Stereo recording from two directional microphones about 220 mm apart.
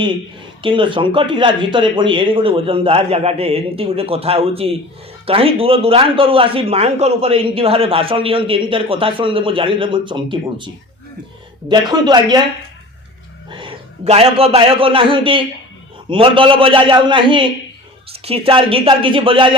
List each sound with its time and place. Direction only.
0.6 s speech: 20° right (ahead or behind)
11.7 s speech: 20° right (ahead or behind)
13.5 s a man's voice: 20° right (ahead or behind)